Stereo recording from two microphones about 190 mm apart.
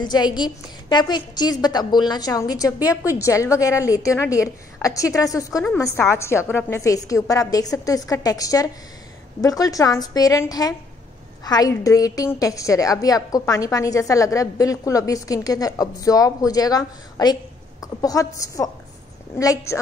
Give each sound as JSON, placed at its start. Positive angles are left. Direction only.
{"t": 0.0, "sound": "a woman's voice", "side_deg": 20}